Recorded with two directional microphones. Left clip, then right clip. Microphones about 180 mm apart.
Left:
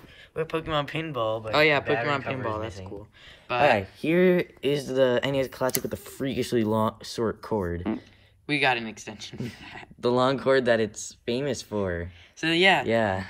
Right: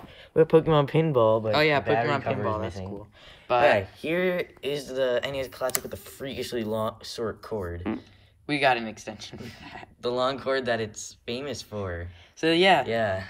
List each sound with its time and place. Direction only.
0.3 s speech: 50° right (ahead or behind)
1.5 s speech: 5° right (ahead or behind)
3.6 s speech: 35° left (ahead or behind)
8.5 s speech: 10° right (ahead or behind)
10.0 s speech: 30° left (ahead or behind)
12.4 s speech: 10° right (ahead or behind)
12.8 s speech: 30° left (ahead or behind)